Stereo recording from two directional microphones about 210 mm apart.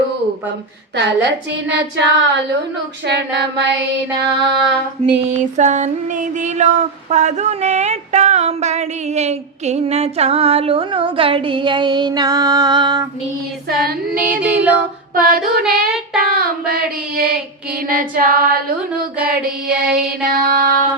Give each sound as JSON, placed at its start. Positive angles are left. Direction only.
{"t": 0.9, "sound": "a woman's voice", "side_deg": -55}
{"t": 5.5, "sound": "a sound", "side_deg": -35}
{"t": 13.7, "sound": "child singing", "side_deg": -50}
{"t": 14.4, "sound": "female singing", "side_deg": -5}
{"t": 15.1, "sound": "child singing", "side_deg": -45}